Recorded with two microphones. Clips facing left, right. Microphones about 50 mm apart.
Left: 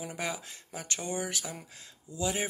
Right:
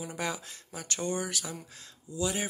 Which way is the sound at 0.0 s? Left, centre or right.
Centre.